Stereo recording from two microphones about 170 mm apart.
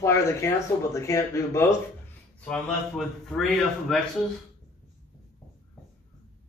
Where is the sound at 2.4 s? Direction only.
5° left (ahead or behind).